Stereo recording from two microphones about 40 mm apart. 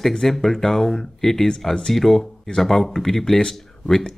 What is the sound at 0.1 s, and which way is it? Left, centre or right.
Speech, centre.